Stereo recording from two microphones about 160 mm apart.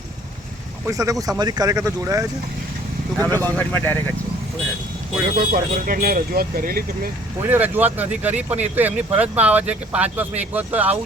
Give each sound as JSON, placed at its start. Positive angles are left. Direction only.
{"t": 0.9, "sound": "speech", "side_deg": -20}
{"t": 3.2, "sound": "speech", "side_deg": 10}
{"t": 5.4, "sound": "speech", "side_deg": -60}
{"t": 7.5, "sound": "speech", "side_deg": -10}